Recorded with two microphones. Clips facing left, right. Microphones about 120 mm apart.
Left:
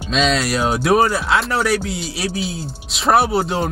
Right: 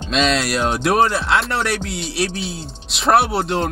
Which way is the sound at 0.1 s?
Centre (ahead or behind).